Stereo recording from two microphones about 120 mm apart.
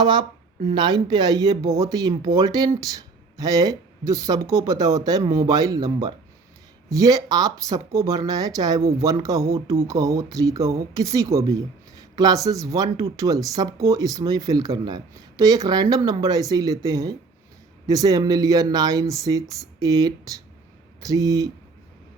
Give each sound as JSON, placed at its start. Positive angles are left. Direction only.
{"t": 0.0, "sound": "speech", "side_deg": -40}